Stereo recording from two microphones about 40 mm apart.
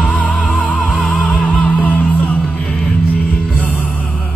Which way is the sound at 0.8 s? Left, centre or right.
Left.